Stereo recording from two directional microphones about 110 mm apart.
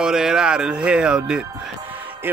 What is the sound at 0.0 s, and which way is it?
Speech, 5° right (ahead or behind).